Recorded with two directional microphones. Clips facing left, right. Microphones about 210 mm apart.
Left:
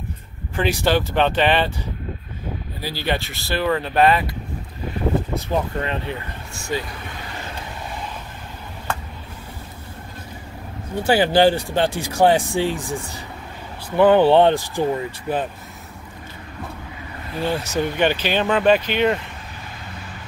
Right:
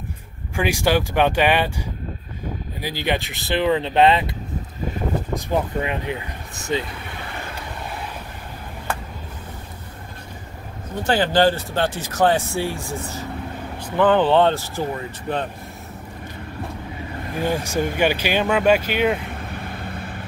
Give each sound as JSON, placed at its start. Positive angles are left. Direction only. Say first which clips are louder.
{"t": 0.6, "sound": "speech", "louder": "even", "side_deg": -10}
{"t": 2.8, "sound": "speech", "louder": "right 1 dB", "side_deg": -15}
{"t": 5.3, "sound": "speech", "louder": "even", "side_deg": -15}
{"t": 11.1, "sound": "speech", "louder": "left 2 dB", "side_deg": 10}
{"t": 17.4, "sound": "speech", "louder": "even", "side_deg": -15}
{"t": 19.5, "sound": "vehicle", "louder": "right 6 dB", "side_deg": -55}